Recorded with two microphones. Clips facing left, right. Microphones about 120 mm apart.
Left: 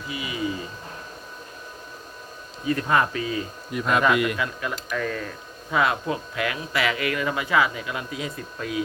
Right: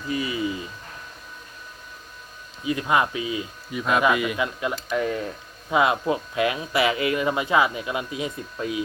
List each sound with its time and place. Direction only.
0.1 s speech: 35° right (ahead or behind)
2.6 s speech: 10° right (ahead or behind)
3.7 s speech: centre (ahead or behind)
4.4 s speech: 20° right (ahead or behind)